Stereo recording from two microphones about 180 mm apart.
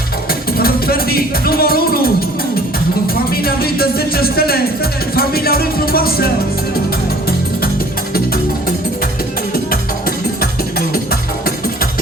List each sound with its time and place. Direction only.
0.3 s music: 55° left (ahead or behind)
3.4 s music: 55° left (ahead or behind)
10.4 s music: 60° left (ahead or behind)